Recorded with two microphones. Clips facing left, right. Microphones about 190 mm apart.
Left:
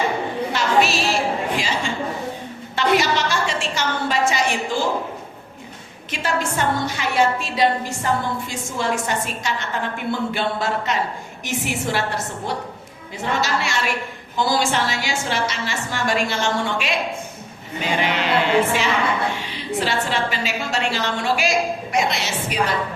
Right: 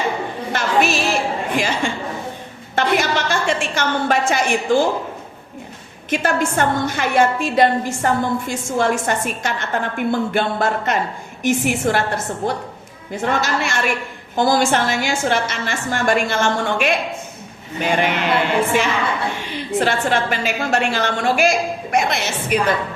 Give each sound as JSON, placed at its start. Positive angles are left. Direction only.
{"t": 0.5, "sound": "singing", "side_deg": -50}
{"t": 1.5, "sound": "a woman's voice", "side_deg": -55}
{"t": 2.7, "sound": "a sound", "side_deg": -50}
{"t": 6.1, "sound": "a woman's voice", "side_deg": -50}